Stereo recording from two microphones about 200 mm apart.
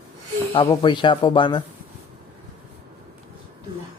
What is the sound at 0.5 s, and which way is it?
Speech, 25° left (ahead or behind).